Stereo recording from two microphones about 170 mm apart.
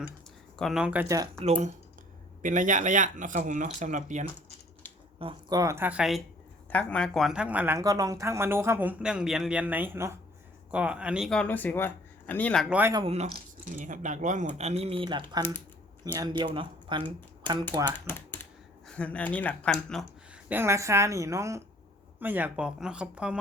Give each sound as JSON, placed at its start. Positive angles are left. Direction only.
{"t": 0.5, "sound": "speech", "side_deg": 0}
{"t": 1.0, "sound": "speech", "side_deg": -20}
{"t": 1.4, "sound": "speech", "side_deg": -40}
{"t": 5.2, "sound": "speech", "side_deg": -25}
{"t": 13.7, "sound": "speech", "side_deg": -50}
{"t": 18.0, "sound": "speech", "side_deg": 15}
{"t": 20.5, "sound": "speech", "side_deg": -15}